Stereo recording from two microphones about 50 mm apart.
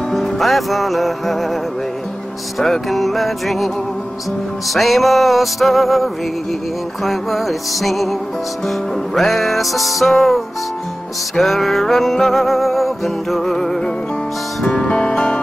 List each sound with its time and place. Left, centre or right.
0.1 s music: centre
2.6 s music: centre